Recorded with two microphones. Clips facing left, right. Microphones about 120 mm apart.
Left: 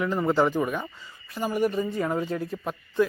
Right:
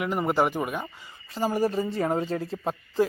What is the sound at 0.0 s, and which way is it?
Speech, 15° right (ahead or behind).